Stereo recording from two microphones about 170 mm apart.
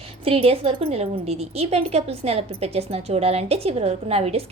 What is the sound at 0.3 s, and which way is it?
A woman's voice, 30° right (ahead or behind).